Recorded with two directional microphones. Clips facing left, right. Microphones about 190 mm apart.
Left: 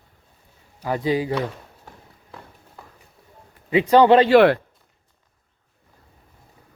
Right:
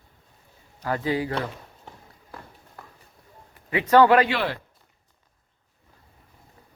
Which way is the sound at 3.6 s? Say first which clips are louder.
Left 3 dB; 15° left (ahead or behind).